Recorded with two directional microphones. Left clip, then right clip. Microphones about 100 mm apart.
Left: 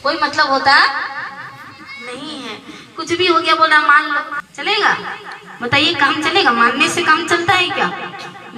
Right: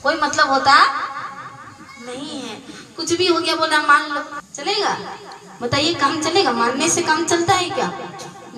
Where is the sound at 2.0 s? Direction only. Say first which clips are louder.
Left 1 dB; 25° right (ahead or behind).